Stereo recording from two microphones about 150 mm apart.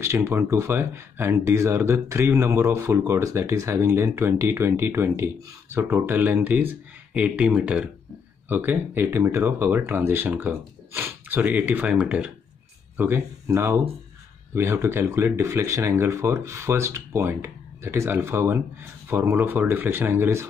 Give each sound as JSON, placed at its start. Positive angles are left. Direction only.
{"t": 0.0, "sound": "speech", "side_deg": -15}